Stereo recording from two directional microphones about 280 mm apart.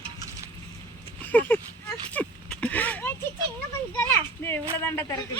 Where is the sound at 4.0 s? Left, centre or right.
Centre.